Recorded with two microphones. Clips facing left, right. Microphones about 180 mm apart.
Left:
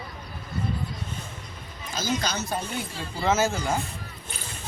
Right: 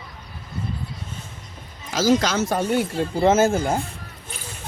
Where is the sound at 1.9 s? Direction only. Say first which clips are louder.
Right 9 dB; 90° right.